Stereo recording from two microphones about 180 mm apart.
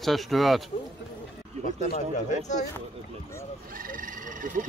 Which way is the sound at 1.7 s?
45° left (ahead or behind).